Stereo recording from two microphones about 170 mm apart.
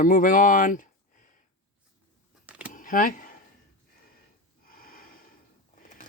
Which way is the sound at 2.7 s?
55° left (ahead or behind).